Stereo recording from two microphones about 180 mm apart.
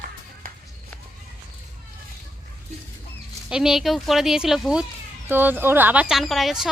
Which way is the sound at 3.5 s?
5° right (ahead or behind).